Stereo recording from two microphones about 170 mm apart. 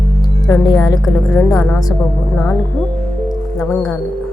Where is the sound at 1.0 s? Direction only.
5° left (ahead or behind).